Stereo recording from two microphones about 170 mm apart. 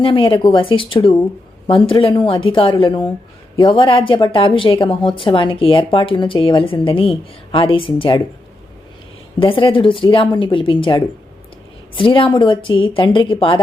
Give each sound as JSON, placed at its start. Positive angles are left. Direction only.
{"t": 0.0, "sound": "a woman's voice", "side_deg": 30}
{"t": 9.4, "sound": "a woman's voice", "side_deg": 30}